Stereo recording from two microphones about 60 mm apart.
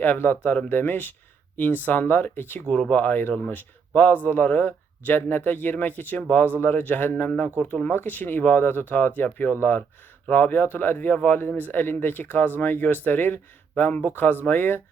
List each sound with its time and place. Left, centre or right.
0.0 s speech: left